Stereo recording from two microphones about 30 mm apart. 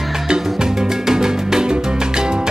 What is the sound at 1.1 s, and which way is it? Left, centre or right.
Music, centre.